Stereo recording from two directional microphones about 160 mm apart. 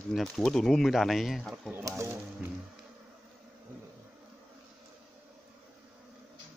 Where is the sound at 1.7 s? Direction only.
20° right (ahead or behind).